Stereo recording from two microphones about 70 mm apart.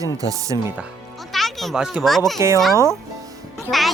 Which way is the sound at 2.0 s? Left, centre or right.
Centre.